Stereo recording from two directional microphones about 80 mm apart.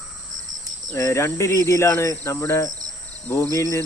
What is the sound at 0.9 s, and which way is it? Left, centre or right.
Speech, left.